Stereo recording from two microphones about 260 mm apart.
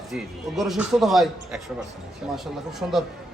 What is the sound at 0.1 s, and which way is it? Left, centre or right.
A man's voice, centre.